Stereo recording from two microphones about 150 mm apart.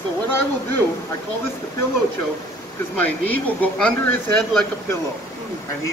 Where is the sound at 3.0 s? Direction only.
10° left (ahead or behind).